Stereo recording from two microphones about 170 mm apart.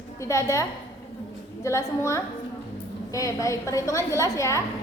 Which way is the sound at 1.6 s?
15° left (ahead or behind).